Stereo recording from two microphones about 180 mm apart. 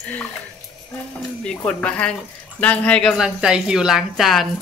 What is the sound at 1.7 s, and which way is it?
A woman's voice, 5° left (ahead or behind).